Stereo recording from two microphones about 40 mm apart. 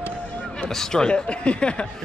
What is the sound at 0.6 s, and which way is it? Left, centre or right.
Speech, centre.